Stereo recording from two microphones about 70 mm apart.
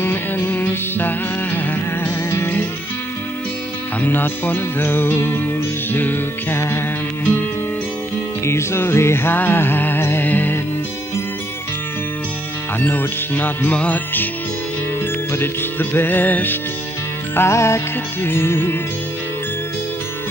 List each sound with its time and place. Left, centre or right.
0.0 s music: left
4.0 s music: left
8.5 s music: left
12.8 s music: left
15.3 s music: left
17.4 s music: left